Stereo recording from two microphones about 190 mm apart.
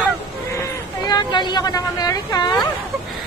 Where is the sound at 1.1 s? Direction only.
25° left (ahead or behind).